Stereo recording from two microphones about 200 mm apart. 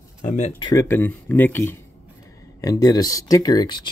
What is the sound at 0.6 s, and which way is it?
Speech, 15° left (ahead or behind).